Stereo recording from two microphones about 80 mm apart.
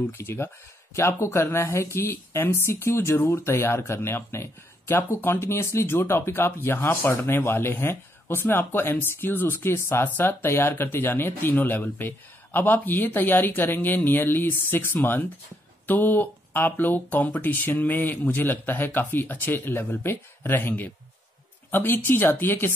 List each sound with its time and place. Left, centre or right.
0.0 s speech: left